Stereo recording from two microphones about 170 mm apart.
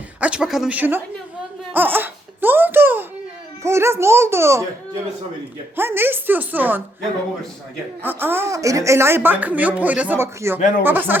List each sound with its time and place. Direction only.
0.2 s a woman's voice: 5° right (ahead or behind)
1.7 s crying: 10° right (ahead or behind)
3.6 s a woman's voice: 15° right (ahead or behind)
5.7 s a woman's voice: 15° right (ahead or behind)
8.0 s a woman's voice: 10° right (ahead or behind)
10.6 s speech: 50° left (ahead or behind)
10.8 s a woman's voice: 10° right (ahead or behind)